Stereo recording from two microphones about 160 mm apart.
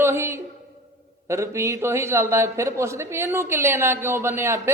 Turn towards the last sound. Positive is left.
turn(degrees=-15)  # may be behind; listen again after turning